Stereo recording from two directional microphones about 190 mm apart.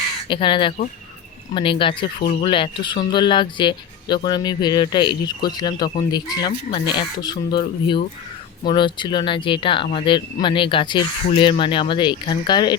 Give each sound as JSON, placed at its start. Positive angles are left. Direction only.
{"t": 0.3, "sound": "speech", "side_deg": 25}
{"t": 2.1, "sound": "speech", "side_deg": 50}
{"t": 2.4, "sound": "speech", "side_deg": 25}